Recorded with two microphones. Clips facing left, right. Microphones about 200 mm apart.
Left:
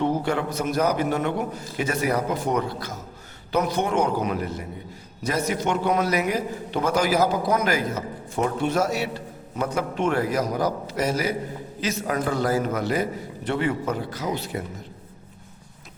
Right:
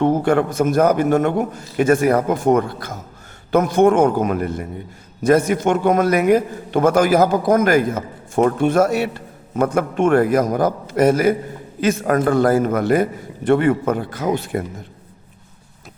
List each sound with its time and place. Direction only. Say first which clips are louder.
0.0 s a man's voice: right 7 dB; 50° right (ahead or behind)